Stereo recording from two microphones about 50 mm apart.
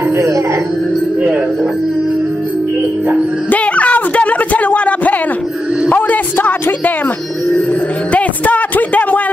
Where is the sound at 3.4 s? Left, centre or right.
Left.